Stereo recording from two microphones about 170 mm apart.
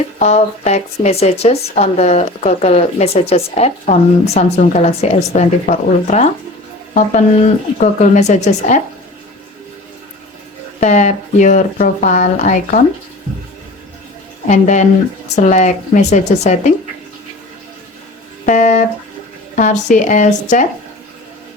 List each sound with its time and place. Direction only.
0.2 s speech: 40° left (ahead or behind)
10.8 s speech: 45° left (ahead or behind)
14.4 s speech: 45° left (ahead or behind)
18.4 s speech: 45° left (ahead or behind)